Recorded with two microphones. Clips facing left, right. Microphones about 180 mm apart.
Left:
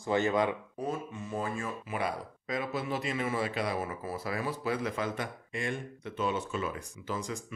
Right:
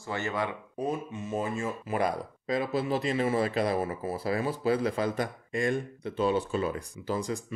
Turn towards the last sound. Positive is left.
turn(degrees=-35)  # may be behind; listen again after turning